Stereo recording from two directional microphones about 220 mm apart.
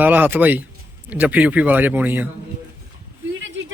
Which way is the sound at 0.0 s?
10° right (ahead or behind).